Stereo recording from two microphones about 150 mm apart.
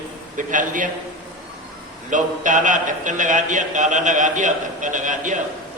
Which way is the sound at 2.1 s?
60° right (ahead or behind).